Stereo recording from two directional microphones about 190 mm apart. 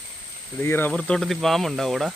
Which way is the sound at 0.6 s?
10° left (ahead or behind).